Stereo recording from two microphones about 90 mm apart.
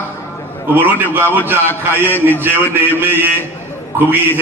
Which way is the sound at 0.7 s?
20° right (ahead or behind).